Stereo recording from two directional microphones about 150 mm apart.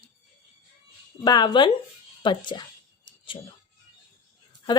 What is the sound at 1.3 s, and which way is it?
A woman's voice, 30° left (ahead or behind).